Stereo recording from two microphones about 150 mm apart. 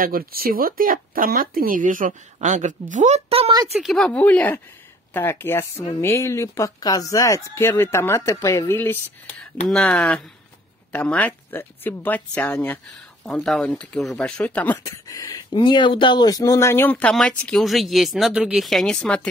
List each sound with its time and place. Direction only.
0.0 s speech: 75° right (ahead or behind); by 3.5 s 40° right (ahead or behind)
3.8 s speech: 5° left (ahead or behind)
15.0 s speech: 25° left (ahead or behind); by 19.2 s 5° left (ahead or behind)